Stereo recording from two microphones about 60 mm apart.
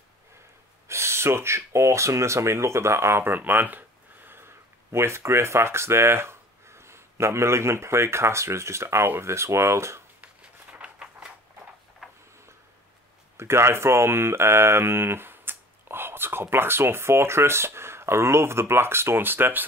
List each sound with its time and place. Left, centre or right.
0.8 s speech: right
3.3 s speech: right
10.2 s a sound: right
13.4 s speech: right